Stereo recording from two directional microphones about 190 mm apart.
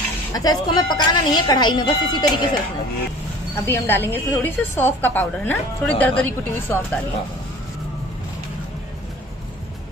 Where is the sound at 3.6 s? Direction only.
10° left (ahead or behind).